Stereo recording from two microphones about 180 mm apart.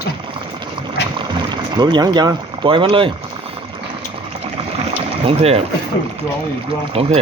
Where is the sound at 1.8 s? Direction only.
25° right (ahead or behind).